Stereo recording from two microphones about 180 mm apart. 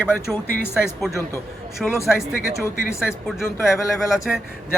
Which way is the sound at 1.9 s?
15° left (ahead or behind).